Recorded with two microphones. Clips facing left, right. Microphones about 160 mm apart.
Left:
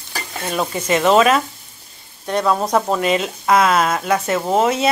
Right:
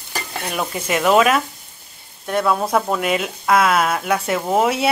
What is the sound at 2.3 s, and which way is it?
Stir, 5° right (ahead or behind).